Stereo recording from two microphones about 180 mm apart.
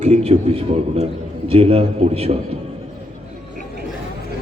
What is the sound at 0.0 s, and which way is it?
A man's voice, 35° right (ahead or behind).